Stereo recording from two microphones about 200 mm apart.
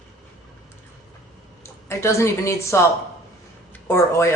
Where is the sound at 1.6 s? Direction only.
15° left (ahead or behind).